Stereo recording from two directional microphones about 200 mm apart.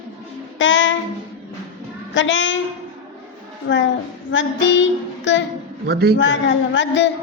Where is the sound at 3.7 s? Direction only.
70° left (ahead or behind).